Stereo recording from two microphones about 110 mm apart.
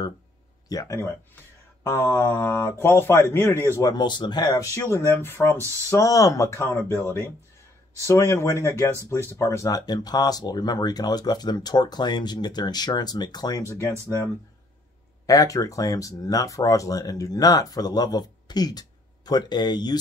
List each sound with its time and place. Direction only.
0.7 s speech: 30° left (ahead or behind)
3.9 s speech: 40° left (ahead or behind)
4.7 s speech: 25° left (ahead or behind)
15.2 s speech: 30° left (ahead or behind)